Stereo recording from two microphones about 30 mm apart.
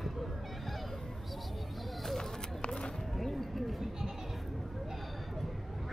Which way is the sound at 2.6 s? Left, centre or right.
Left.